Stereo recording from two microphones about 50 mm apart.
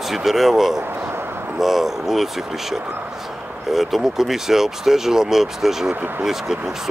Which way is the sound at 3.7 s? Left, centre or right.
Centre.